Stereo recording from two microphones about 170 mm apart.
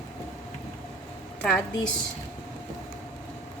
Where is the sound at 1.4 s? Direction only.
5° left (ahead or behind).